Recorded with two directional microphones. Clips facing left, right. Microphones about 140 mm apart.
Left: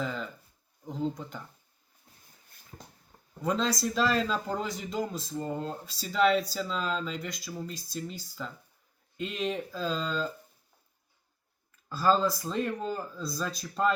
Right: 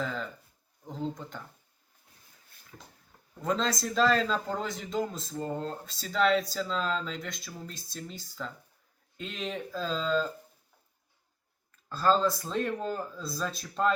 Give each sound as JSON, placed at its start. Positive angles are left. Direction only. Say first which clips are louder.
{"t": 0.0, "sound": "a man's voice", "louder": "even", "side_deg": 0}
{"t": 2.7, "sound": "a sound", "louder": "left 1 dB", "side_deg": 25}
{"t": 3.4, "sound": "a man's voice", "louder": "left 1 dB", "side_deg": 0}
{"t": 11.9, "sound": "a man's voice", "louder": "even", "side_deg": 5}